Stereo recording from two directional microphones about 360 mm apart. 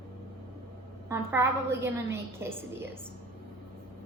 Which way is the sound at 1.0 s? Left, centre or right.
Centre.